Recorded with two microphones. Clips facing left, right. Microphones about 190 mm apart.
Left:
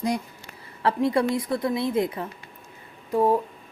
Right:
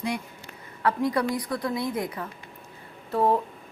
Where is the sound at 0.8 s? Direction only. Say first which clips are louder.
Left 3 dB; 25° left (ahead or behind).